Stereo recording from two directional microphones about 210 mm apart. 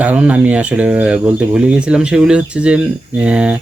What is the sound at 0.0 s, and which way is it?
Speech, 5° right (ahead or behind).